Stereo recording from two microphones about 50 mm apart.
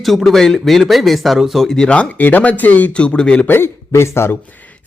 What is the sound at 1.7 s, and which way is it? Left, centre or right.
Speech, centre.